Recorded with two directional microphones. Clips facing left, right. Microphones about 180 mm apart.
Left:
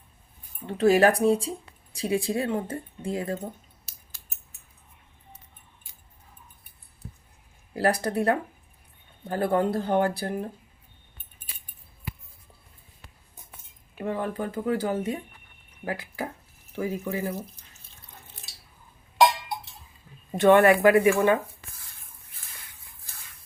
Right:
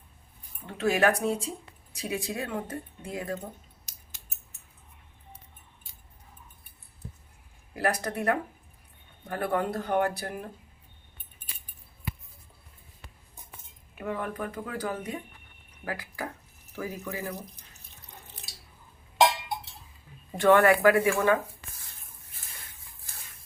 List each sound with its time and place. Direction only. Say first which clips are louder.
0.7 s speech: left 5 dB; 35° left (ahead or behind)
7.8 s speech: left 5 dB; 30° left (ahead or behind)
14.0 s speech: left 4 dB; 30° left (ahead or behind)
17.3 s drip: left 5 dB; 15° right (ahead or behind)
20.3 s speech: left 3 dB; 20° left (ahead or behind)